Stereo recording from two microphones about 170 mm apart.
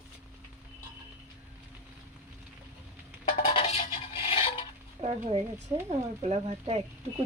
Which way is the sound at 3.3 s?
30° left (ahead or behind).